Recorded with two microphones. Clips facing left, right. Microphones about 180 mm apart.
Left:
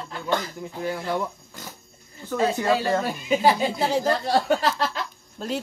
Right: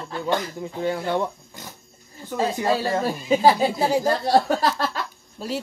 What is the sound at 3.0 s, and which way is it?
Speech, 35° right (ahead or behind).